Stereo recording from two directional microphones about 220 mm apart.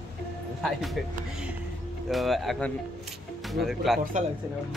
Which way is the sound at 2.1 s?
Centre (ahead or behind).